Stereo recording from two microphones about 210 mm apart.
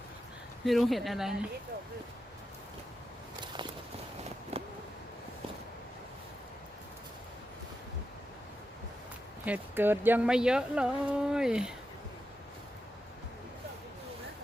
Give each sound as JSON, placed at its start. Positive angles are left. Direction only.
{"t": 0.6, "sound": "speech", "side_deg": 0}
{"t": 4.5, "sound": "a sound", "side_deg": -30}
{"t": 9.5, "sound": "speech", "side_deg": -10}